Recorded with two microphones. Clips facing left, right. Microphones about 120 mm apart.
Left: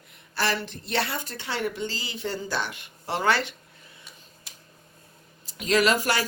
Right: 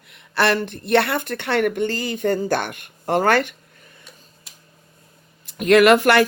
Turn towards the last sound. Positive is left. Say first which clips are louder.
# right 10 dB
turn(degrees=-60)  # may be behind; listen again after turning